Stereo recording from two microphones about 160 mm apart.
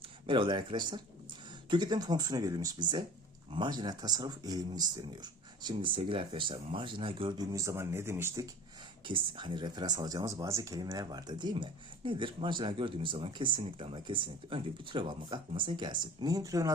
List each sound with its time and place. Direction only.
0.3 s speech: 30° right (ahead or behind); by 8.4 s 15° right (ahead or behind)
9.0 s speech: 30° right (ahead or behind)